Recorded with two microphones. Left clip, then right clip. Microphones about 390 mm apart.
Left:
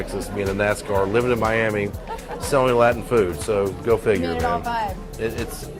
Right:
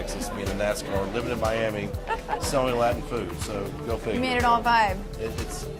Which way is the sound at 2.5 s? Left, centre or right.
Left.